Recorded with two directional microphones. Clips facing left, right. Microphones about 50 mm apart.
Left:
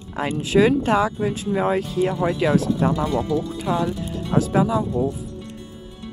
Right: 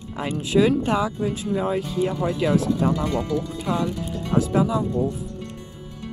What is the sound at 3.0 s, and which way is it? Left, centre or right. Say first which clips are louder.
Speech: left 2 dB; centre.